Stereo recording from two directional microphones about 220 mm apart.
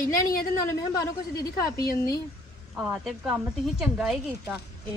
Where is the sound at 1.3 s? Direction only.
15° left (ahead or behind).